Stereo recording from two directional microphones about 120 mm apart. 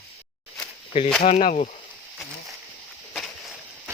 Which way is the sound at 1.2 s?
85° left.